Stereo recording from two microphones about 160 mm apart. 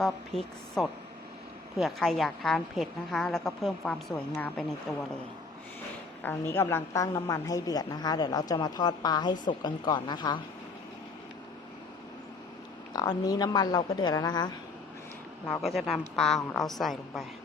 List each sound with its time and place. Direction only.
0.0 s a woman's voice: centre (ahead or behind)
6.2 s a woman's voice: 15° left (ahead or behind)
12.9 s a woman's voice: 25° left (ahead or behind)
15.6 s a woman's voice: centre (ahead or behind)